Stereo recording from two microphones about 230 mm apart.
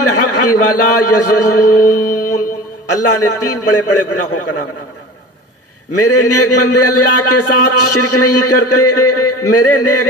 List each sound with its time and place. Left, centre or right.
0.0 s a man's voice: left
2.0 s music: left
2.9 s a man's voice: left
5.9 s a man's voice: left